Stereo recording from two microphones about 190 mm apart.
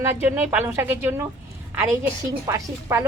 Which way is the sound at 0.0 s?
10° right (ahead or behind).